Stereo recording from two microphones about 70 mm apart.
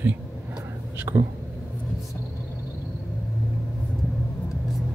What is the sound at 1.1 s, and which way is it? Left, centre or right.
Speech, right.